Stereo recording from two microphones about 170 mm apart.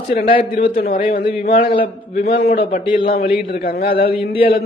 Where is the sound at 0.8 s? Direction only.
60° left (ahead or behind).